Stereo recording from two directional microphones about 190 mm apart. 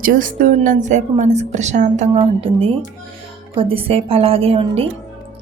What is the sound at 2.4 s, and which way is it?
A woman's voice, 30° right (ahead or behind).